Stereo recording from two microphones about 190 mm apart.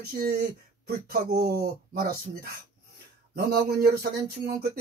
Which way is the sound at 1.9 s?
55° right (ahead or behind).